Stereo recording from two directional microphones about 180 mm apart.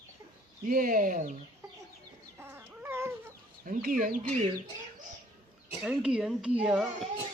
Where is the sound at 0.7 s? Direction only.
50° right (ahead or behind).